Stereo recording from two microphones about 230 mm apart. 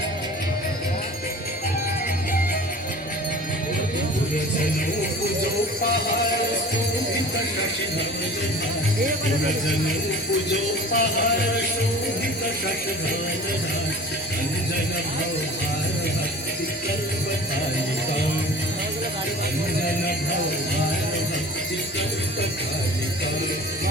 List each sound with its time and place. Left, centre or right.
10.5 s music: left